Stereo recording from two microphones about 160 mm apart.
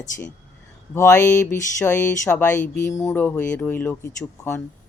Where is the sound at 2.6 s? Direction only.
55° left (ahead or behind).